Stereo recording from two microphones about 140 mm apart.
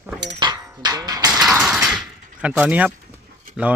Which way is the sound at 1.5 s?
5° right (ahead or behind).